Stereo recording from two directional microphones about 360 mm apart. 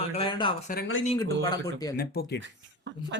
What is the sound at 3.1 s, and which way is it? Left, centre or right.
Speech, right.